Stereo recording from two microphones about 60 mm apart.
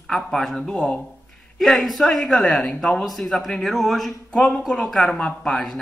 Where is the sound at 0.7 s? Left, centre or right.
Centre.